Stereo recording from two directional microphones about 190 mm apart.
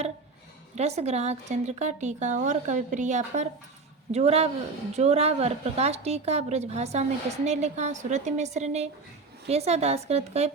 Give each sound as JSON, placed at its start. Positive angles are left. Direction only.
{"t": 0.8, "sound": "speech", "side_deg": -35}